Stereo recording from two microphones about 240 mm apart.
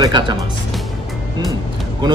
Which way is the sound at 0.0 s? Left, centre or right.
Centre.